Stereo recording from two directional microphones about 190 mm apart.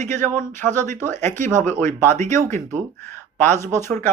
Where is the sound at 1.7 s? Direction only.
15° left (ahead or behind).